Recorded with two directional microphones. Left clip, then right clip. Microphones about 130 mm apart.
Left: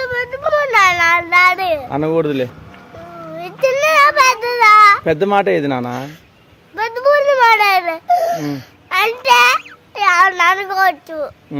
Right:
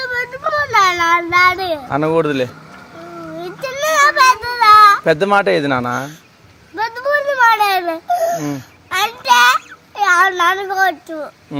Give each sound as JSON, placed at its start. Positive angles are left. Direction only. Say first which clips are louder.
{"t": 0.0, "sound": "child singing", "louder": "left 1 dB", "side_deg": 25}
{"t": 1.9, "sound": "speech", "louder": "right 1 dB", "side_deg": 5}
{"t": 3.3, "sound": "child singing", "louder": "left 9 dB", "side_deg": 25}
{"t": 5.0, "sound": "speech", "louder": "right 1 dB", "side_deg": 10}
{"t": 6.7, "sound": "babbling", "louder": "left 4 dB", "side_deg": 25}